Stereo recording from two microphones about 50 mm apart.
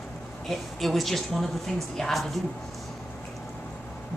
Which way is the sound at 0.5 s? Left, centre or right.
Centre.